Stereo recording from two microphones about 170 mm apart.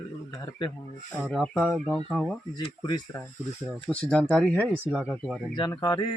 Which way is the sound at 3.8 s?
5° left (ahead or behind).